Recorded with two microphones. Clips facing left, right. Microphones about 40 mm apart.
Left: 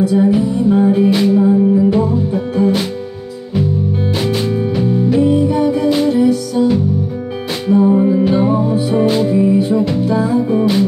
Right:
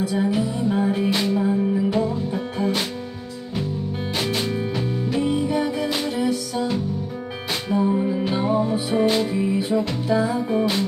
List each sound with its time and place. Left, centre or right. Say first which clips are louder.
0.2 s music: left 9 dB; centre
5.2 s music: left 7 dB; centre
7.6 s music: left 10 dB; centre